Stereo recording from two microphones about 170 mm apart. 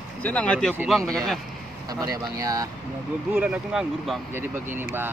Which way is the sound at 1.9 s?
20° right (ahead or behind).